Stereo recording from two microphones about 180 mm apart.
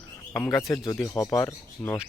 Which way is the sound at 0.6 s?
15° left (ahead or behind).